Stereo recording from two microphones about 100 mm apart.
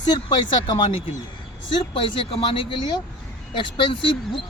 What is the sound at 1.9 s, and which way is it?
Speech, 60° left (ahead or behind).